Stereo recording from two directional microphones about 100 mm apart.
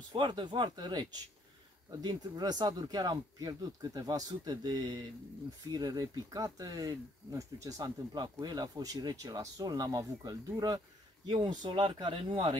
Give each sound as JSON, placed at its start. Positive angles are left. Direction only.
{"t": 0.1, "sound": "speech", "side_deg": -55}
{"t": 11.2, "sound": "speech", "side_deg": -50}